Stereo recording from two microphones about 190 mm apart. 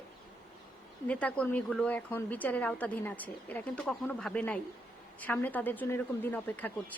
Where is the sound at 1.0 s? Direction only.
5° left (ahead or behind).